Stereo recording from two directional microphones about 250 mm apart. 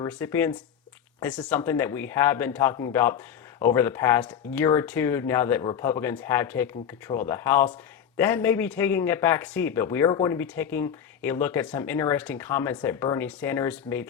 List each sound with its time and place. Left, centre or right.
0.1 s speech: centre